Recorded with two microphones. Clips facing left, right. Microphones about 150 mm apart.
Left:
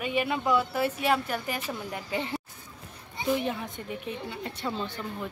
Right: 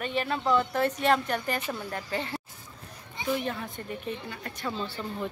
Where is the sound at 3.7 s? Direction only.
15° left (ahead or behind).